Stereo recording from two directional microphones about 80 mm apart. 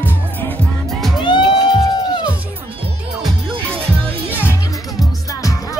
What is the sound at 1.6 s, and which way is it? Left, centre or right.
Music, left.